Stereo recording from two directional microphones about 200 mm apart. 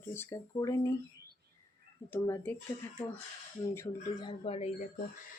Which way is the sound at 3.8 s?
20° left (ahead or behind).